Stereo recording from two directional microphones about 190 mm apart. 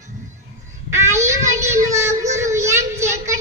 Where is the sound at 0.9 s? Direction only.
15° right (ahead or behind).